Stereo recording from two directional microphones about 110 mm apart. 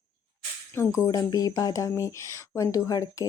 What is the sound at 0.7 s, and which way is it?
Speech, 30° left (ahead or behind).